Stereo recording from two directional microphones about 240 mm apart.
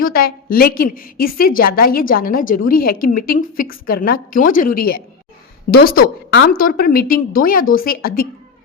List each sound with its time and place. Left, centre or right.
0.0 s a woman's voice: left